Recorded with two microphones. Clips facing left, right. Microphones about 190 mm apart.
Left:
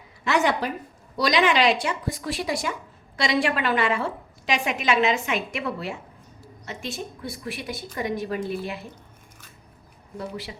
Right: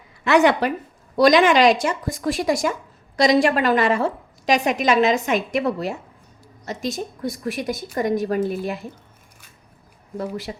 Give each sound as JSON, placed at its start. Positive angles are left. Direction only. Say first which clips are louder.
{"t": 0.3, "sound": "a woman's voice", "louder": "right 6 dB", "side_deg": -65}
{"t": 1.1, "sound": "a woman's voice", "louder": "right 7 dB", "side_deg": -50}
{"t": 10.2, "sound": "a woman's voice", "louder": "right 5 dB", "side_deg": -45}